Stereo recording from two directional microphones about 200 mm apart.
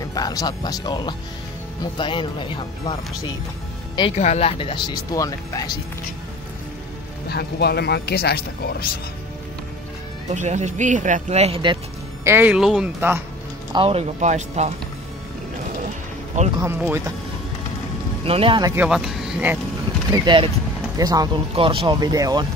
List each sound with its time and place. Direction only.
0.0 s speech: 20° left (ahead or behind)
4.2 s speech: 35° left (ahead or behind); by 5.7 s 15° left (ahead or behind)
7.2 s speech: 55° left (ahead or behind)
10.3 s speech: 35° right (ahead or behind)
12.3 s speech: 10° right (ahead or behind)
13.7 s speech: 30° right (ahead or behind)
16.5 s speech: 10° right (ahead or behind)
18.2 s speech: 30° right (ahead or behind)
18.8 s speech: 5° right (ahead or behind)
20.1 s speech: 25° right (ahead or behind)